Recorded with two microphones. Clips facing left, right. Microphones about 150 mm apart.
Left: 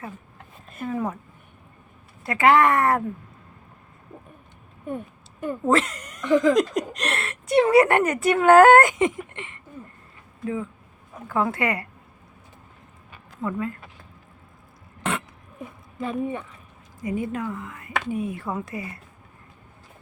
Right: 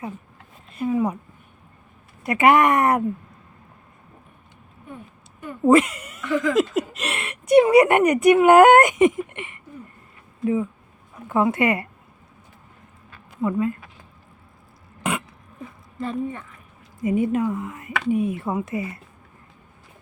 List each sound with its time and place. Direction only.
0.9 s a woman's voice: 15° right (ahead or behind)
2.2 s speech: 20° right (ahead or behind)
5.6 s speech: 10° right (ahead or behind)
6.2 s speech: 20° left (ahead or behind)
6.5 s a woman's voice: 5° right (ahead or behind); by 11.9 s 20° right (ahead or behind)
13.4 s a woman's voice: 15° right (ahead or behind)
15.1 s throat clearing: 10° right (ahead or behind)
16.0 s speech: 5° left (ahead or behind)
16.2 s speech: 15° left (ahead or behind)
17.0 s speech: 20° right (ahead or behind)